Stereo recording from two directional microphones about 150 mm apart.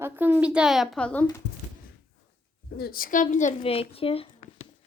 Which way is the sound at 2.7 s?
85° left.